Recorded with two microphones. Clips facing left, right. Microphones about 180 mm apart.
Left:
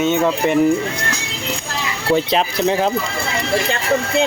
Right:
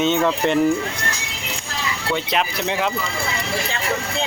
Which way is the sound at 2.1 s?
35° left (ahead or behind).